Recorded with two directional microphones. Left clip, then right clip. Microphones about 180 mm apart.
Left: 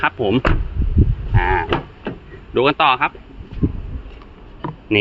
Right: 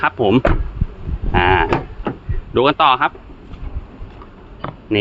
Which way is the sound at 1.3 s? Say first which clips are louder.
Right 5 dB; 40° right (ahead or behind).